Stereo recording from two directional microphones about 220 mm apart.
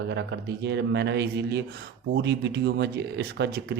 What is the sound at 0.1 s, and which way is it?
Speech, 50° right (ahead or behind).